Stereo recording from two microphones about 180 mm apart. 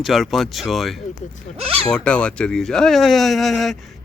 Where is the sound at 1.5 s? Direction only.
30° right (ahead or behind).